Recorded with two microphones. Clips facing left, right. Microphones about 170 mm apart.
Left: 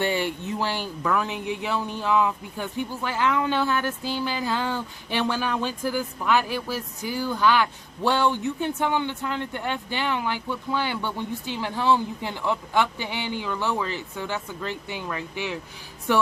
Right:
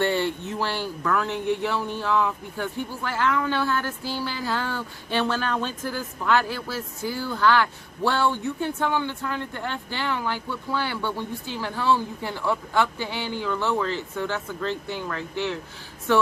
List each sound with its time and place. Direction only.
0.0 s speech: 15° left (ahead or behind)